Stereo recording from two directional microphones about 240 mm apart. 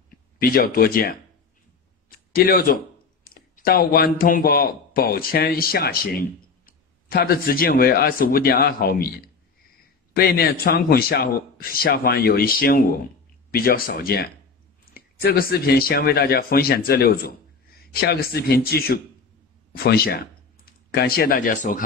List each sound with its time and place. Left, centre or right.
0.4 s speech: left
2.0 s a sound: left
3.3 s speech: left
10.1 s speech: left